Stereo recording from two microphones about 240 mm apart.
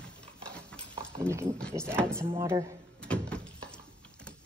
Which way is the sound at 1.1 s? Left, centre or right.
Centre.